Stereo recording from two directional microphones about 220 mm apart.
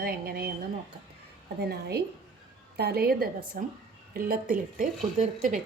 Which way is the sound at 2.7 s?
45° right (ahead or behind).